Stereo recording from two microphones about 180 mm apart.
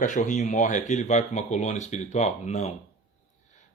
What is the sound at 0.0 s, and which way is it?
Speech, 45° left (ahead or behind).